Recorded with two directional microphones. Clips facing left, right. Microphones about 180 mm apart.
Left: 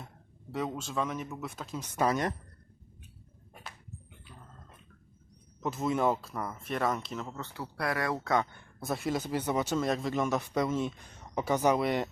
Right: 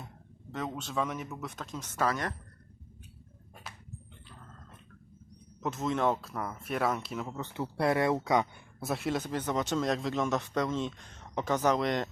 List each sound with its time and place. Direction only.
0.5 s speech: 5° left (ahead or behind)
2.0 s speech: 20° left (ahead or behind)
5.6 s speech: 5° left (ahead or behind); by 8.6 s 15° right (ahead or behind)
8.8 s speech: centre (ahead or behind)